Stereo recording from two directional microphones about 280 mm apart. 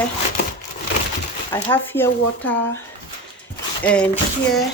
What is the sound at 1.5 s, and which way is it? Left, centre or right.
Speech, centre.